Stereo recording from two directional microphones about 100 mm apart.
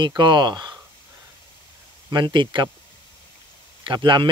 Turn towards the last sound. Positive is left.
turn(degrees=-50)  # may be behind; listen again after turning